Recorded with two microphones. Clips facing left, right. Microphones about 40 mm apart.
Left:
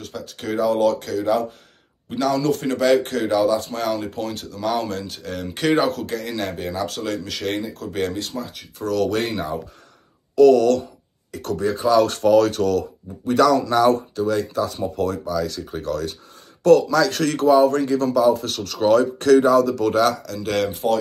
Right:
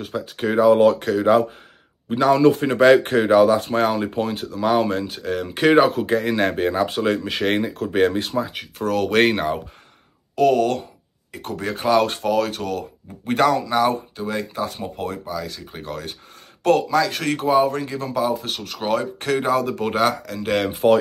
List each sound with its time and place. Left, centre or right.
0.0 s speech: centre
0.6 s speech: right
2.0 s speech: right
2.8 s speech: right; by 6.0 s centre
6.0 s speech: right
8.5 s speech: right
9.1 s speech: right
10.3 s speech: right
12.2 s speech: centre
13.2 s speech: right
13.6 s speech: centre
16.9 s speech: centre
19.5 s speech: right